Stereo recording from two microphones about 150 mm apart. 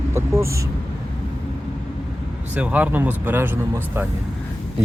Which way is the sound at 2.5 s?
10° right (ahead or behind).